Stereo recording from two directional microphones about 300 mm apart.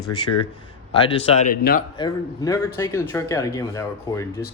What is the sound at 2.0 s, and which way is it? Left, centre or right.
Speech, centre.